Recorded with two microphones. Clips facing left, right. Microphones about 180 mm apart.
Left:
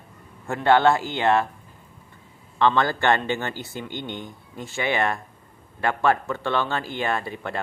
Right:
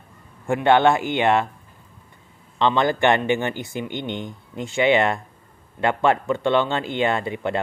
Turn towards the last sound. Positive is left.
turn(degrees=-20)  # may be behind; listen again after turning